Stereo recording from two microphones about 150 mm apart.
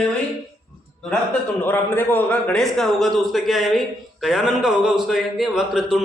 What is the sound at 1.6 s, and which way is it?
A man's voice, 15° left (ahead or behind).